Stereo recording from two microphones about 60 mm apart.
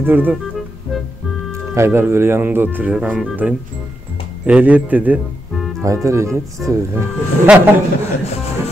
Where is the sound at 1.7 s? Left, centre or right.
Right.